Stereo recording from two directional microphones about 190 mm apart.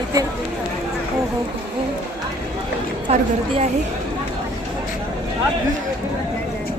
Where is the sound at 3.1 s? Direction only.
35° right (ahead or behind).